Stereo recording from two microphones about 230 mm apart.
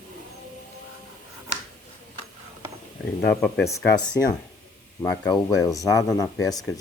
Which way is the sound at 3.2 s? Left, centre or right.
Centre.